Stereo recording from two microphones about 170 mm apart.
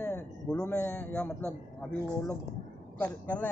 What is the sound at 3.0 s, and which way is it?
Speech, 10° left (ahead or behind).